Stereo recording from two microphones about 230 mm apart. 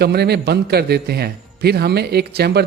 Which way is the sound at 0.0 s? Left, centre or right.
Right.